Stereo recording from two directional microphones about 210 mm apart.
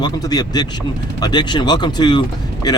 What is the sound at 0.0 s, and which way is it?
Speech, 20° left (ahead or behind).